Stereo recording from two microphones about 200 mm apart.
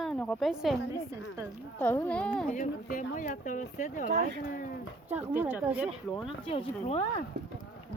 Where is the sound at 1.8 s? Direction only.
10° left (ahead or behind).